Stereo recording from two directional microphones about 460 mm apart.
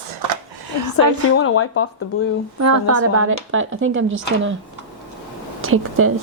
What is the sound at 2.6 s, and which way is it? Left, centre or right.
Speech, right.